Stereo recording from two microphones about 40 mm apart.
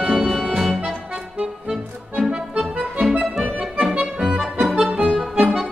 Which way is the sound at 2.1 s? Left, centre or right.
Right.